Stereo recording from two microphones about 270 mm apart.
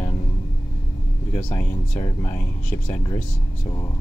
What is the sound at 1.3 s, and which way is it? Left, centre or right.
Speech, centre.